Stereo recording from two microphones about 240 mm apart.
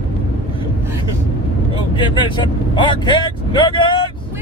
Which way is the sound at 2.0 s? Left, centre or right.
Centre.